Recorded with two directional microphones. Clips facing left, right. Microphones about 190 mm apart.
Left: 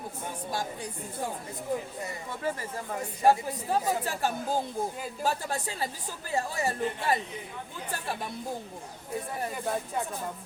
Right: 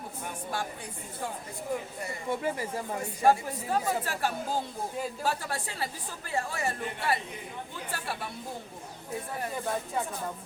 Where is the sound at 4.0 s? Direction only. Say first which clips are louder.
Left 1 dB; 15° left (ahead or behind).